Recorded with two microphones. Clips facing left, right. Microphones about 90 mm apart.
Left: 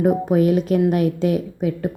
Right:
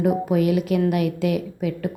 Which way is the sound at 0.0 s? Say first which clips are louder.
Left 3 dB; 35° left (ahead or behind).